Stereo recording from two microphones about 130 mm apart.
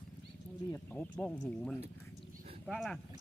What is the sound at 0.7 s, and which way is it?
Speech, 10° left (ahead or behind).